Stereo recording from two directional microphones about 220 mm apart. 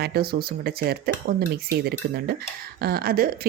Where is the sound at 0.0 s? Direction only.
45° right (ahead or behind).